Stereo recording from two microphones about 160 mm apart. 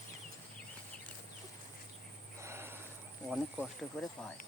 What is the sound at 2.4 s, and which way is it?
Frog, 15° right (ahead or behind).